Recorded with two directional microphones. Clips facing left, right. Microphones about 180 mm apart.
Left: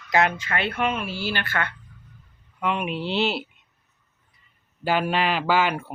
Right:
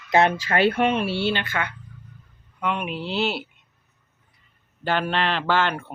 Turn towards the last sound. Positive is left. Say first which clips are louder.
# left 1 dB
turn(degrees=10)  # may be behind; listen again after turning